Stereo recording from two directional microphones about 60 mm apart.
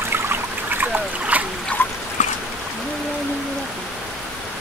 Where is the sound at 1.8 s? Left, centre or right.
Left.